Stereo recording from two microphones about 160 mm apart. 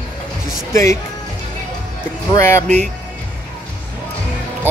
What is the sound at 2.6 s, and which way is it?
Speech, 45° right (ahead or behind).